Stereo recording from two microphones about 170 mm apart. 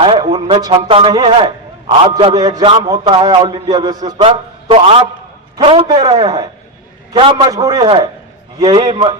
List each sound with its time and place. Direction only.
0.0 s a man's voice: 30° right (ahead or behind)
4.3 s a man's voice: 35° right (ahead or behind)
7.8 s a man's voice: 30° right (ahead or behind)